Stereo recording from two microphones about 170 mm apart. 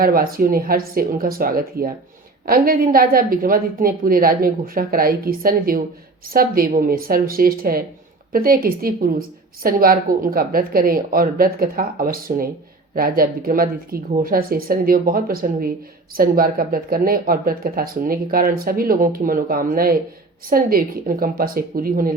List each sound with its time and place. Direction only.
0.0 s speech: 60° right (ahead or behind)